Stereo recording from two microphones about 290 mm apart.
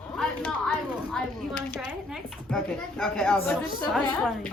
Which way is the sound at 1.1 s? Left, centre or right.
Centre.